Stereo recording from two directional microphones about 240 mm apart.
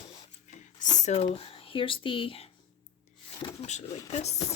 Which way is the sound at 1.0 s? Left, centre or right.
Left.